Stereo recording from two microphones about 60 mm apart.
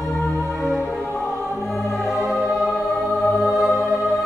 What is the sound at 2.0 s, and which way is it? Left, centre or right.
Music, centre.